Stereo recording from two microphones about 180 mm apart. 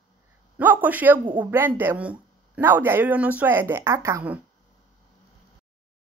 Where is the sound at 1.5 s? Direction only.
10° right (ahead or behind).